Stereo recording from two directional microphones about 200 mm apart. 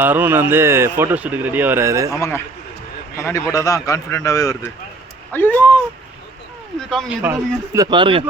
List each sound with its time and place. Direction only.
0.0 s speech: 10° right (ahead or behind)
2.1 s a man's voice: 15° left (ahead or behind)
6.7 s speech: centre (ahead or behind)
7.2 s speech: 10° right (ahead or behind)